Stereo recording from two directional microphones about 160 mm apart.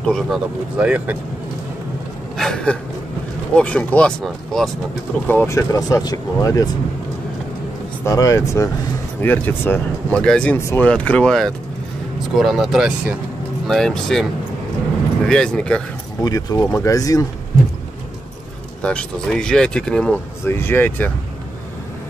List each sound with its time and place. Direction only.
0.0 s speech: centre (ahead or behind)
2.3 s a sound: 5° left (ahead or behind)
3.5 s speech: 5° left (ahead or behind)
5.3 s speech: 15° left (ahead or behind)
8.0 s speech: 20° left (ahead or behind)
10.6 s speech: 15° left (ahead or behind)
10.9 s speech: 5° left (ahead or behind)
15.2 s speech: 5° left (ahead or behind)
16.2 s speech: 25° left (ahead or behind)
18.8 s speech: 5° left (ahead or behind)